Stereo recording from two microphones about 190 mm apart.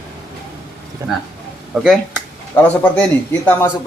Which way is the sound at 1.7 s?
Centre (ahead or behind).